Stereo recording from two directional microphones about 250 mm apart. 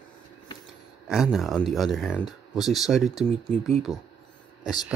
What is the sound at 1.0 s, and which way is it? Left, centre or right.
A child's voice, centre.